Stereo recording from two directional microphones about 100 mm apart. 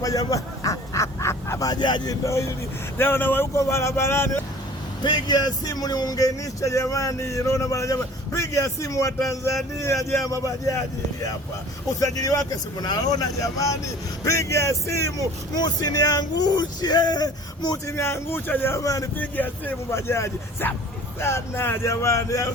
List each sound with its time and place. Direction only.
0.0 s quack: 35° left (ahead or behind)
2.2 s speech: 30° left (ahead or behind)
5.0 s speech: 45° left (ahead or behind)
11.9 s speech: 35° left (ahead or behind)
15.5 s speech: 40° left (ahead or behind)
17.8 s speech: 25° left (ahead or behind)
18.8 s speech: 35° left (ahead or behind)
19.1 s speech: 20° left (ahead or behind)